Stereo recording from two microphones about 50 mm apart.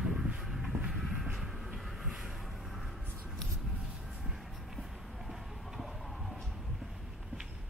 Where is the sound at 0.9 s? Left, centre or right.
Centre.